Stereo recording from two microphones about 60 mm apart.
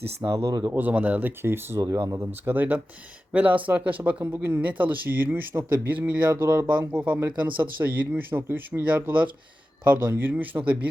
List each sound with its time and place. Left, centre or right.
0.3 s speech: right
0.7 s speech: right
1.4 s speech: right
1.8 s speech: right
2.4 s speech: right
6.7 s speech: right